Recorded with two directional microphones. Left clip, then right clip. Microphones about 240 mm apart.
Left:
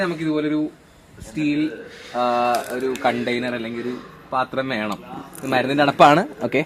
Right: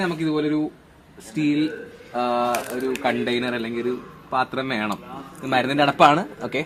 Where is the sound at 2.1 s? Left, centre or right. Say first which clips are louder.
Left 3 dB; left.